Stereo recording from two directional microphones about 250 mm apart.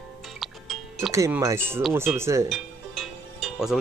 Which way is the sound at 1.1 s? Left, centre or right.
Centre.